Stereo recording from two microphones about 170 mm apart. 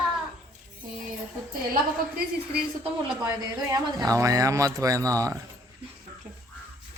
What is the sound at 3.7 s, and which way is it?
Speech, 20° right (ahead or behind).